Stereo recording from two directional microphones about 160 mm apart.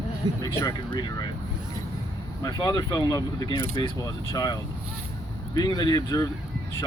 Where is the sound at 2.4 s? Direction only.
25° left (ahead or behind).